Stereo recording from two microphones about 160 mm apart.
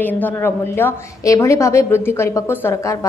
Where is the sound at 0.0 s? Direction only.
10° left (ahead or behind).